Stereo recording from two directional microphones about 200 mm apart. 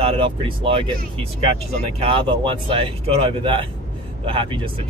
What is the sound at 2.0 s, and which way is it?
Speech, 25° right (ahead or behind).